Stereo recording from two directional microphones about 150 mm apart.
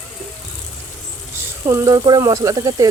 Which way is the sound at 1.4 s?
20° right (ahead or behind).